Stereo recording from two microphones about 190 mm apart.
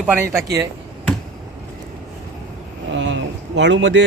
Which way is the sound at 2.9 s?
75° right (ahead or behind).